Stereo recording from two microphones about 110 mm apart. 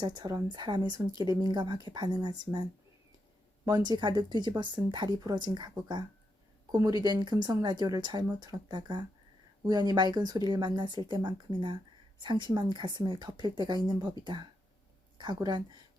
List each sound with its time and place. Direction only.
0.0 s speech: 40° right (ahead or behind)
3.7 s speech: 40° right (ahead or behind)